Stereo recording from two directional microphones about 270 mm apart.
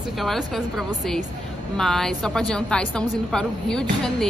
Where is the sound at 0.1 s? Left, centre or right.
Centre.